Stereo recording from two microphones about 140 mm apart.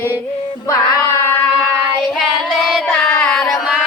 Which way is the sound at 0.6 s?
25° left (ahead or behind).